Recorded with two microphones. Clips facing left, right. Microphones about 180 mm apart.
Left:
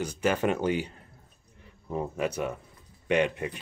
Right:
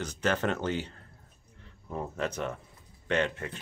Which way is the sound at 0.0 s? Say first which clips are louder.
Left 3 dB; 10° left (ahead or behind).